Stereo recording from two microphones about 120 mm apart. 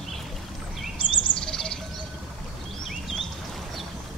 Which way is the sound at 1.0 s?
45° left (ahead or behind).